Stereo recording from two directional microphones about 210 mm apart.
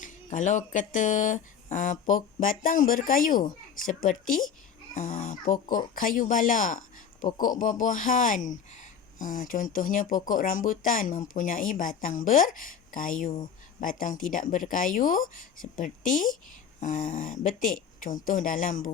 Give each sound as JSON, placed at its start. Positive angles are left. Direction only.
{"t": 0.0, "sound": "speech", "side_deg": 35}